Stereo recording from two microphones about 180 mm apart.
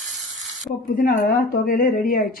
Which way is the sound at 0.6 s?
50° left (ahead or behind).